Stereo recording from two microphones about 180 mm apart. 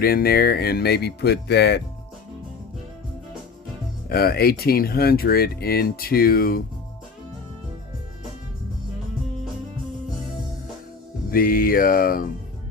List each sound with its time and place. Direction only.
0.0 s speech: 55° left (ahead or behind)
4.1 s speech: 60° left (ahead or behind)
11.3 s mantra: 55° left (ahead or behind)